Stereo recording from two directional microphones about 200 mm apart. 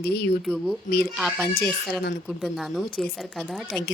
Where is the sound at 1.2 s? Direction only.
Centre (ahead or behind).